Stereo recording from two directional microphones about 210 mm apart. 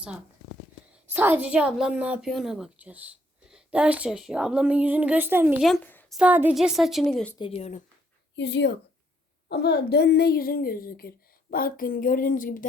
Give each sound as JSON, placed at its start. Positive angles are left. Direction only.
{"t": 1.1, "sound": "a woman's voice", "side_deg": -10}
{"t": 6.1, "sound": "a woman's voice", "side_deg": -5}
{"t": 7.3, "sound": "speech", "side_deg": 25}
{"t": 8.4, "sound": "a woman's voice", "side_deg": 55}